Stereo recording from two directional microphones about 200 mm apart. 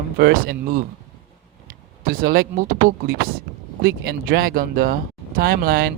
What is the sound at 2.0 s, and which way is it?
Speech, 45° right (ahead or behind).